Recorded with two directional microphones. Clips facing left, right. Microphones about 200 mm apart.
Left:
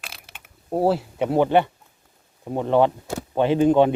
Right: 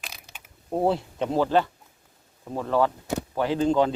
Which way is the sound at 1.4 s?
20° left (ahead or behind).